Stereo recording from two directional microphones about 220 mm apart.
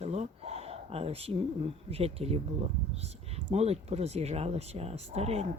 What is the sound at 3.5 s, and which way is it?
Speech, 30° right (ahead or behind).